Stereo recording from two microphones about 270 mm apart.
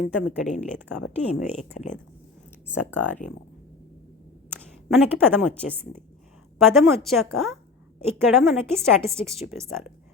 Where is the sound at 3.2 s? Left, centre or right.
Left.